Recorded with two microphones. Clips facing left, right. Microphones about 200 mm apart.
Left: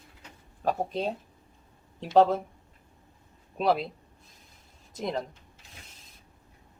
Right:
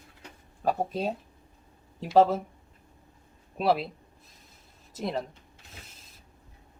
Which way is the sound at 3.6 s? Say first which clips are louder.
Even; 5° right (ahead or behind).